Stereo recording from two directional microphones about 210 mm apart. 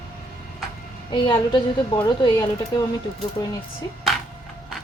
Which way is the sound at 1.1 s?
20° left (ahead or behind).